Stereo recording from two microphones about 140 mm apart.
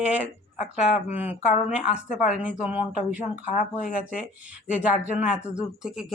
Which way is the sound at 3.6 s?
70° left (ahead or behind).